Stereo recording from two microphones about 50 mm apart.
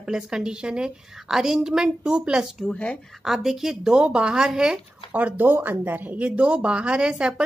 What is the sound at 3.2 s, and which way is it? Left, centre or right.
Speech, centre.